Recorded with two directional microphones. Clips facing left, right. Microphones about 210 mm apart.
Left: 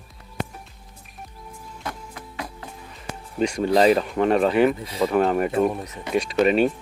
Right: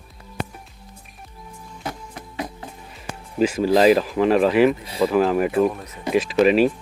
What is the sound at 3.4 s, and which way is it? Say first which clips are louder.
Speech: right 2 dB; 5° right (ahead or behind).